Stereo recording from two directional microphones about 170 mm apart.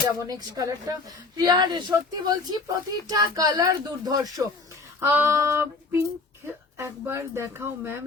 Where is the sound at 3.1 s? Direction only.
20° right (ahead or behind).